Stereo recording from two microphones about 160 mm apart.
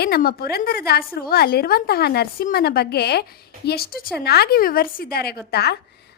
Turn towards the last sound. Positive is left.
turn(degrees=90)